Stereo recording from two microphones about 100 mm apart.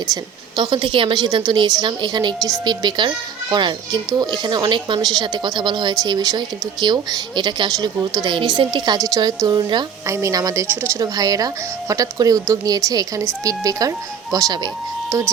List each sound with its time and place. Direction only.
0.1 s a woman's voice: 50° right (ahead or behind)
10.1 s speech: 30° right (ahead or behind)